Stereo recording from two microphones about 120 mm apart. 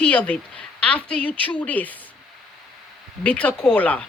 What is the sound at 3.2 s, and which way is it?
Speech, 10° left (ahead or behind).